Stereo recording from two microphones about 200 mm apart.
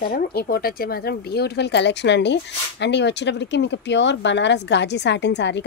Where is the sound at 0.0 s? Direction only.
50° left (ahead or behind).